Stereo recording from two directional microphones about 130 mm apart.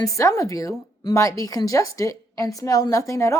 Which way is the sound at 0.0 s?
25° left (ahead or behind).